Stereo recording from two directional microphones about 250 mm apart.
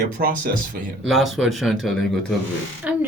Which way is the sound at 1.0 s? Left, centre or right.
Centre.